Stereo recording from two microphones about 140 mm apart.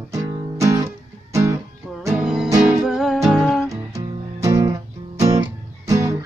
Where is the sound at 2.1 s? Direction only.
5° right (ahead or behind).